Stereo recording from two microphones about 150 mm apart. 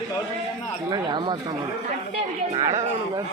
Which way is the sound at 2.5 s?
45° right (ahead or behind).